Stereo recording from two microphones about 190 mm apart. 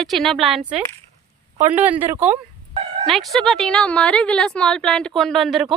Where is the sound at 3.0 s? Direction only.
Centre (ahead or behind).